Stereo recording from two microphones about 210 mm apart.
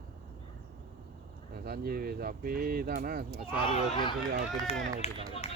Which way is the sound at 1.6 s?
45° right (ahead or behind).